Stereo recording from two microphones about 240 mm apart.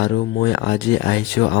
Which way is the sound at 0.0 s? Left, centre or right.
Left.